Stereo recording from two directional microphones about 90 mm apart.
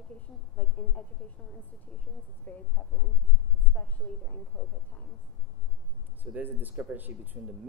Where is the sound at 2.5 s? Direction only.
15° left (ahead or behind).